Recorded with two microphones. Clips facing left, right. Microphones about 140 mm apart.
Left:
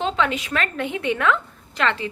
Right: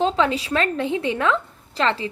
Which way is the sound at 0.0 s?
35° right (ahead or behind).